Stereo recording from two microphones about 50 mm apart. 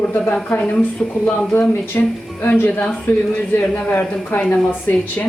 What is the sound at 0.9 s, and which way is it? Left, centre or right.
Speech, centre.